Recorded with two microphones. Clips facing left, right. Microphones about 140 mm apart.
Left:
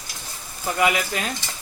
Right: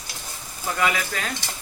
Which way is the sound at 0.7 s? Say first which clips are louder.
Left 3 dB; 20° left (ahead or behind).